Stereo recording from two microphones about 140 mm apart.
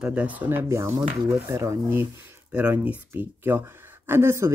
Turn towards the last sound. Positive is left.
turn(degrees=-20)  # may be behind; listen again after turning